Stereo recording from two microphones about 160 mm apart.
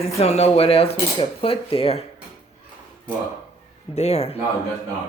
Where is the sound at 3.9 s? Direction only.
40° left (ahead or behind).